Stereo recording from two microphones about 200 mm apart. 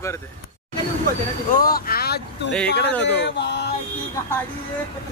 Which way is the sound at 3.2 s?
60° left (ahead or behind).